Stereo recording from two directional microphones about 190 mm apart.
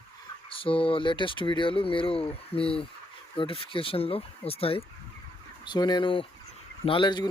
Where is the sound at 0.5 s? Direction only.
30° left (ahead or behind).